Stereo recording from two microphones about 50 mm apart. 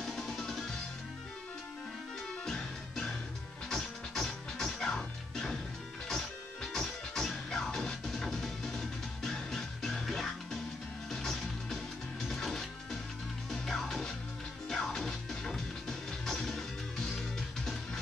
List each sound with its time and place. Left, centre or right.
0.0 s music: centre
2.4 s music: centre